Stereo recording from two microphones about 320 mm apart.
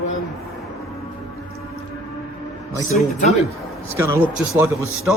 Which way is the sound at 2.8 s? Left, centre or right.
Left.